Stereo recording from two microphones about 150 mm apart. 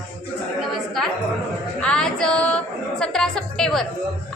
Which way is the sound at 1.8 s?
5° left (ahead or behind).